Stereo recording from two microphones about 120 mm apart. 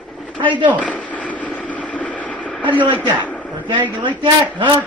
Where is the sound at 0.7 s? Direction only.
10° left (ahead or behind).